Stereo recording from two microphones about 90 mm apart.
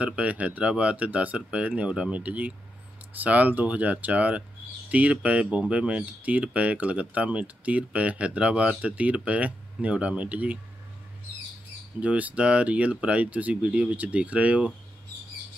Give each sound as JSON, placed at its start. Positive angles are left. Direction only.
{"t": 0.0, "sound": "speech", "side_deg": -15}
{"t": 12.0, "sound": "speech", "side_deg": -15}